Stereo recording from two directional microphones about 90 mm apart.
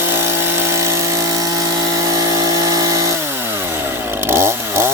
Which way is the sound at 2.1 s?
40° right (ahead or behind).